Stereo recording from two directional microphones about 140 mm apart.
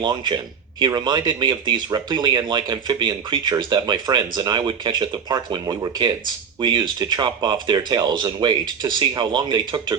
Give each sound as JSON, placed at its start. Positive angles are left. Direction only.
{"t": 0.0, "sound": "speech", "side_deg": -30}